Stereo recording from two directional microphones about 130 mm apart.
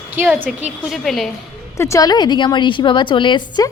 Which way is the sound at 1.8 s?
25° left (ahead or behind).